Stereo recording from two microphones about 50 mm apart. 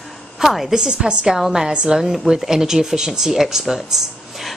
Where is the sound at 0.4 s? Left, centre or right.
Centre.